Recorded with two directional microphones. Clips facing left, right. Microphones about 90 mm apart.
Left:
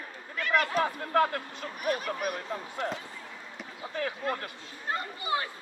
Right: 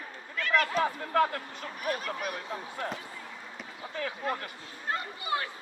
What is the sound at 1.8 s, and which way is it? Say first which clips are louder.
Speech: left 3 dB; 20° left (ahead or behind).